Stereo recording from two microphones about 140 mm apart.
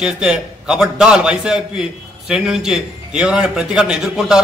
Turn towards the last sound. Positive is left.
turn(degrees=-5)  # may be behind; listen again after turning